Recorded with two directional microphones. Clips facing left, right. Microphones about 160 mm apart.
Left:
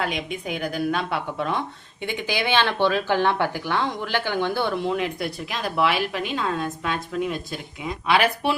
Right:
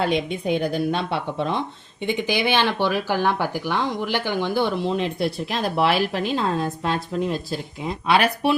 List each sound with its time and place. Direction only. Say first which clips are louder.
0.0 s speech: right 5 dB; 35° right (ahead or behind)